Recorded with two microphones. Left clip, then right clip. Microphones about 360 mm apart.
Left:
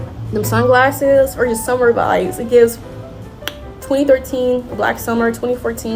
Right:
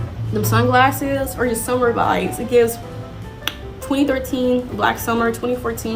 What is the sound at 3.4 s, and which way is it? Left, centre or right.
A woman's voice, centre.